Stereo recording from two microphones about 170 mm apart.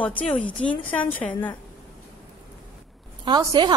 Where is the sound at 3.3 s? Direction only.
25° right (ahead or behind).